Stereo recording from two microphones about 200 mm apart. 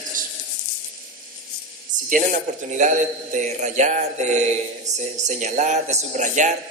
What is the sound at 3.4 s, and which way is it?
A man's voice, 35° right (ahead or behind).